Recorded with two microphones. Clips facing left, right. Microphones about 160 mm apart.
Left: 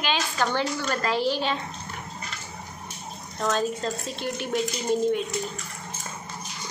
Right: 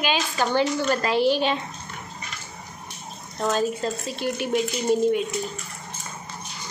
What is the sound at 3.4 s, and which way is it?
Speech, 15° right (ahead or behind).